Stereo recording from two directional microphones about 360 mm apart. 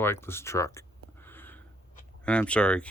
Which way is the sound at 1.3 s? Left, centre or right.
Centre.